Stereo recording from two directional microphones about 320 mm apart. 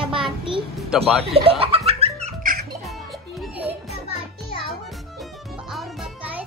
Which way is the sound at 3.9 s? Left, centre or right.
Centre.